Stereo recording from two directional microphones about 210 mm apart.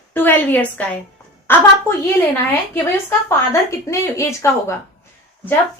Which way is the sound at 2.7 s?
15° left (ahead or behind).